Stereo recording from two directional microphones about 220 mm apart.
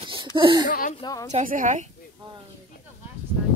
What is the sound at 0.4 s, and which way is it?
Speech, 20° right (ahead or behind).